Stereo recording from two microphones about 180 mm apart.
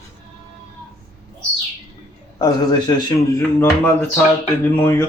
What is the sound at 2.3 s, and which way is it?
Speech, 20° left (ahead or behind).